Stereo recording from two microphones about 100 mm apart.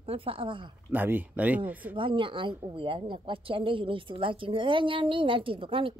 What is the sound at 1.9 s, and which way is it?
A woman's voice, 60° right (ahead or behind).